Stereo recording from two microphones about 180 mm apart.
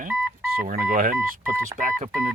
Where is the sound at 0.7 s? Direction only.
50° right (ahead or behind).